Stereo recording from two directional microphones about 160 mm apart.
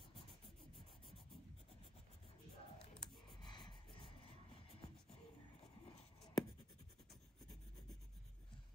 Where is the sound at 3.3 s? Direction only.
30° left (ahead or behind).